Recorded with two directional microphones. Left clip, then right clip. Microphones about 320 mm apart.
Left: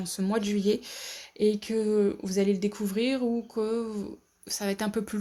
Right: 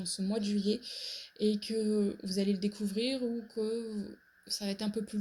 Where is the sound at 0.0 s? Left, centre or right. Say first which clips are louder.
Left 6 dB; centre.